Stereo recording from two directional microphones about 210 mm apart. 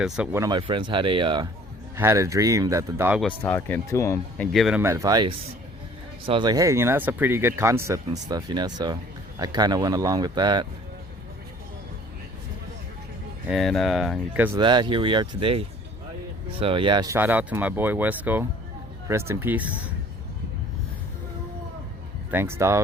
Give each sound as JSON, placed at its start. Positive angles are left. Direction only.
{"t": 0.3, "sound": "speech", "side_deg": -20}
{"t": 3.2, "sound": "speech", "side_deg": 5}
{"t": 4.5, "sound": "speech", "side_deg": 0}
{"t": 4.8, "sound": "speech", "side_deg": -15}
{"t": 13.5, "sound": "speech", "side_deg": 0}
{"t": 14.6, "sound": "speech", "side_deg": -20}
{"t": 22.3, "sound": "speech", "side_deg": -10}